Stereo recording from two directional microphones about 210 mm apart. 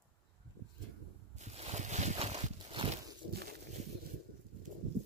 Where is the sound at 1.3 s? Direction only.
30° right (ahead or behind).